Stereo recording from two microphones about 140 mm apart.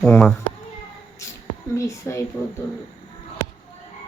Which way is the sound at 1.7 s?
20° left (ahead or behind).